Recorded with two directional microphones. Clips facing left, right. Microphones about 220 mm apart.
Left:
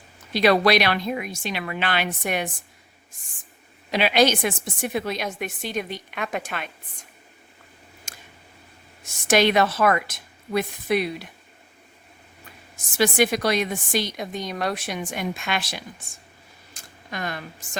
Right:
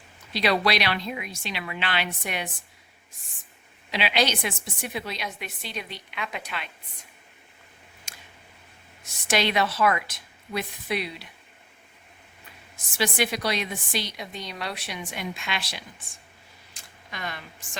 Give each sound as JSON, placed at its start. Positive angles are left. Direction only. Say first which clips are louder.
{"t": 0.3, "sound": "a woman's voice", "louder": "left 6 dB", "side_deg": 50}
{"t": 3.9, "sound": "a woman's voice", "louder": "left 6 dB", "side_deg": 45}
{"t": 8.1, "sound": "a sound", "louder": "left 2 dB", "side_deg": 45}
{"t": 9.0, "sound": "a woman's voice", "louder": "left 6 dB", "side_deg": 45}
{"t": 12.7, "sound": "a woman's voice", "louder": "left 6 dB", "side_deg": 45}
{"t": 16.7, "sound": "a sound", "louder": "left 7 dB", "side_deg": 45}